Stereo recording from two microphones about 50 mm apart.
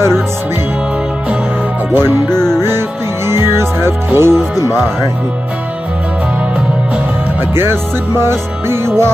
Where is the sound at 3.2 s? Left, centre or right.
Right.